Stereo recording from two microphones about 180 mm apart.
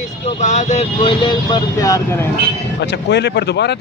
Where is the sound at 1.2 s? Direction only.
20° left (ahead or behind).